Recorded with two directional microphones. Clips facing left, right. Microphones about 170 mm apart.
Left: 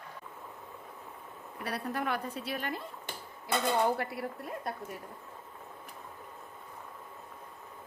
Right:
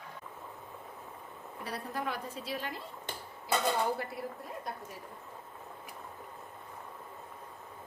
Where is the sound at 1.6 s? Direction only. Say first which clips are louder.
Left 3 dB; 65° left (ahead or behind).